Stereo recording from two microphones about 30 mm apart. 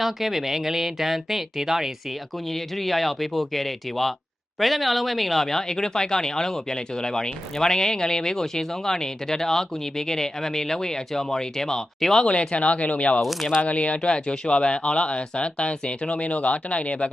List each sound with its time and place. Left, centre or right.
0.0 s speech: centre
2.5 s speech: centre
5.6 s speech: centre
12.3 s speech: left